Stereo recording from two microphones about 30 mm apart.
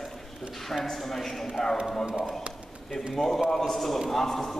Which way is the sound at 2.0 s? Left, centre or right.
Right.